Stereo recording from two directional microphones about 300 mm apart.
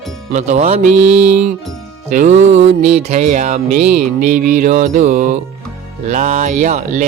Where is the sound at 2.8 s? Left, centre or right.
Right.